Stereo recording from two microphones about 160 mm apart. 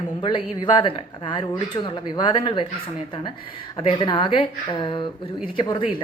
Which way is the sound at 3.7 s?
30° left (ahead or behind).